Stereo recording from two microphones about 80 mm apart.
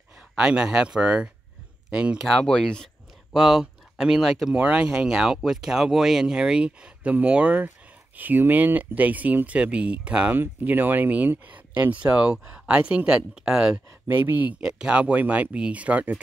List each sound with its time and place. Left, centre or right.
0.4 s speech: centre
2.4 s speech: centre
3.3 s speech: centre
14.0 s speech: right
14.6 s speech: centre